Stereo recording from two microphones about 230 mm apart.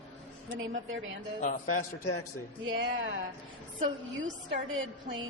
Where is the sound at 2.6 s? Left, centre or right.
Right.